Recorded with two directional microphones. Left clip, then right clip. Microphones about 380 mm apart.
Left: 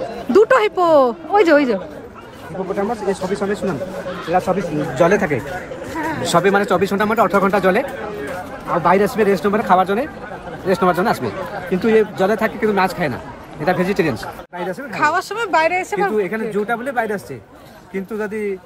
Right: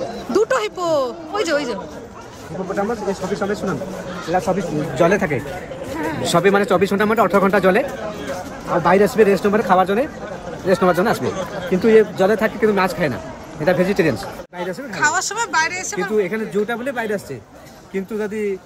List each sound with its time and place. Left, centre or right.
0.3 s speech: left
4.8 s speech: centre
8.8 s speech: centre